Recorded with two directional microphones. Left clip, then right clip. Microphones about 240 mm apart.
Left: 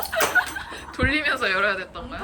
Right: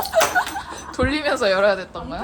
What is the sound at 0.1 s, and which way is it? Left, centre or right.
Speech, centre.